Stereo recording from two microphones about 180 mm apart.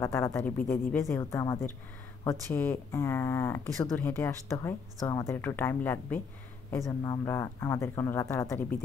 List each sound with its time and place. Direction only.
0.0 s speech: 15° left (ahead or behind)